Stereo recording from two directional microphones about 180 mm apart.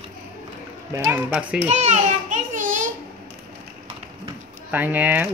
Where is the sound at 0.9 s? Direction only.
15° right (ahead or behind).